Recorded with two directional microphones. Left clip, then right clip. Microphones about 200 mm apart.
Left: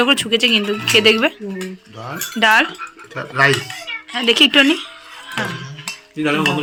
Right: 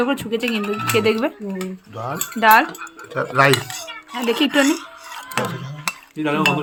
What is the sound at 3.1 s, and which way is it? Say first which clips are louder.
Speech: even; 60° right (ahead or behind).